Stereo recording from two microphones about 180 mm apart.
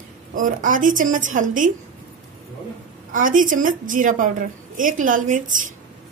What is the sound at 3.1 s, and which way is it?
A woman's voice, 50° right (ahead or behind).